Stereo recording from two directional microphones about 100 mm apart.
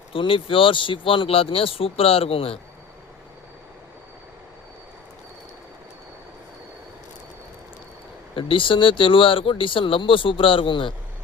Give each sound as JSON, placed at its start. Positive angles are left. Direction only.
{"t": 0.1, "sound": "speech", "side_deg": 60}
{"t": 8.4, "sound": "speech", "side_deg": 60}